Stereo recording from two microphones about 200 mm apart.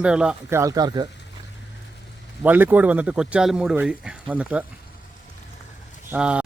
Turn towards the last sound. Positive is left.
turn(degrees=-5)  # may be behind; listen again after turning